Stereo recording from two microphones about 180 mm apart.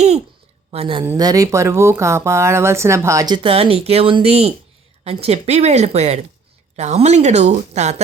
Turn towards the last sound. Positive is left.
turn(degrees=-40)  # may be behind; listen again after turning